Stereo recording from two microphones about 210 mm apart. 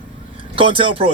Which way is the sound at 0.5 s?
25° right (ahead or behind).